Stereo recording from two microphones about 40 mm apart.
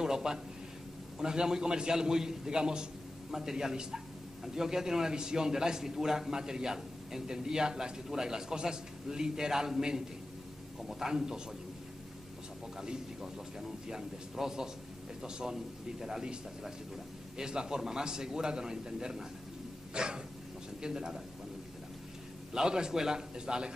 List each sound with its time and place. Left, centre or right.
0.0 s a sound: centre
1.2 s a man's voice: centre
12.8 s a man's voice: centre
17.5 s a man's voice: centre
19.9 s dog: right
20.8 s a man's voice: centre
22.7 s a man's voice: centre